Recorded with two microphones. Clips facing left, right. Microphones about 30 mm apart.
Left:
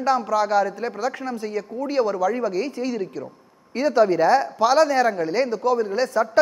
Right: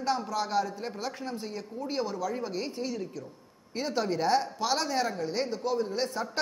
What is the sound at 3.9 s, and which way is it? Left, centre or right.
Speech, left.